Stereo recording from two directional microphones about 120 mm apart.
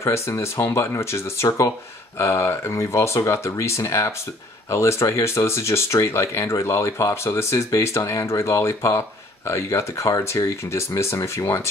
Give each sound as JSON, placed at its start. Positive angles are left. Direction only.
{"t": 0.0, "sound": "speech", "side_deg": 25}